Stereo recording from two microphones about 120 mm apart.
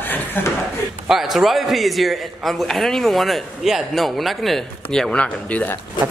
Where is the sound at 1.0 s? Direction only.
5° right (ahead or behind).